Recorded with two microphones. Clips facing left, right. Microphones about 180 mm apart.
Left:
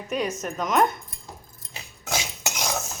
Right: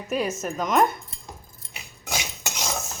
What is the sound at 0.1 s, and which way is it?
Speech, 5° right (ahead or behind).